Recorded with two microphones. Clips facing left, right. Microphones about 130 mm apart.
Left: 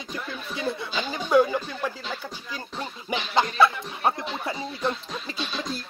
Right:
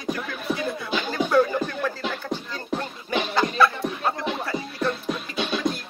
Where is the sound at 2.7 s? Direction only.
55° right (ahead or behind).